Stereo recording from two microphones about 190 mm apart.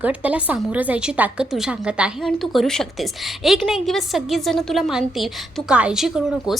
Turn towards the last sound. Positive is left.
turn(degrees=0)  # may be behind; listen again after turning